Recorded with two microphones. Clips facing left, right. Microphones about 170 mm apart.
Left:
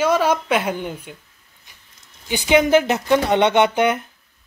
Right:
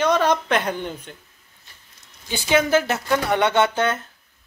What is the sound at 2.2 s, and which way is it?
Speech, 15° left (ahead or behind).